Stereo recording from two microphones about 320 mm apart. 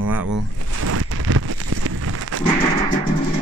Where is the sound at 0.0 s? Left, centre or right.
Right.